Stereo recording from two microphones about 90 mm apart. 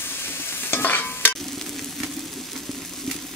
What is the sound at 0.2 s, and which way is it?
Stir, 25° left (ahead or behind).